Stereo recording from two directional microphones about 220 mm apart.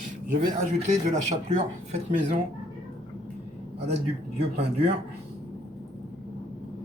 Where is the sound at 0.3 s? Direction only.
35° right (ahead or behind).